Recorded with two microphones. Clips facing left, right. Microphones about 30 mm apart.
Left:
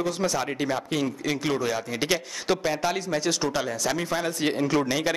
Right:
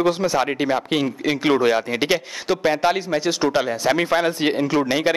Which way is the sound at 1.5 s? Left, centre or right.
Right.